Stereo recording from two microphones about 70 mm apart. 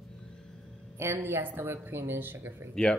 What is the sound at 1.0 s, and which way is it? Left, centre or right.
A woman's voice, right.